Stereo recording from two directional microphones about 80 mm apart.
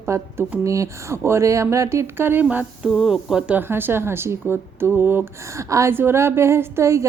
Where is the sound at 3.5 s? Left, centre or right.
Right.